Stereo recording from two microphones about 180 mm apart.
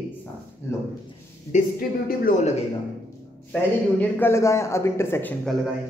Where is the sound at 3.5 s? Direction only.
10° left (ahead or behind).